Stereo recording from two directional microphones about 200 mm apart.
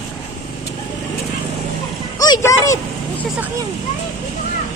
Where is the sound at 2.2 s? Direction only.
20° left (ahead or behind).